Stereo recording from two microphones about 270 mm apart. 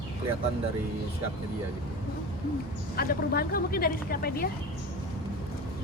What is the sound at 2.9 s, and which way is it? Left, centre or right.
Speech, left.